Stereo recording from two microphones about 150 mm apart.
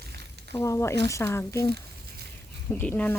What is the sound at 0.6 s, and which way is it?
Speech, 20° left (ahead or behind).